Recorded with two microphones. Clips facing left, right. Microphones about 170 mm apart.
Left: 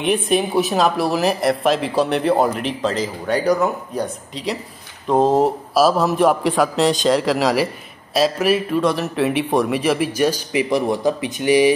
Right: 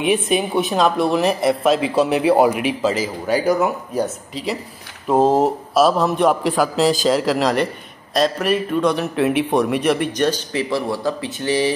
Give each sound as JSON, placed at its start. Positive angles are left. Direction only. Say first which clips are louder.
{"t": 0.0, "sound": "speech", "louder": "even", "side_deg": 0}